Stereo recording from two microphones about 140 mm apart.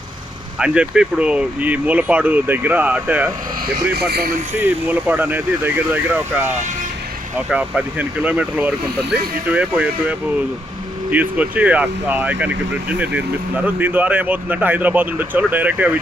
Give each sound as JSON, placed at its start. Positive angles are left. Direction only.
{"t": 0.6, "sound": "speech", "side_deg": -5}
{"t": 4.2, "sound": "speech", "side_deg": -90}
{"t": 4.5, "sound": "speech", "side_deg": -15}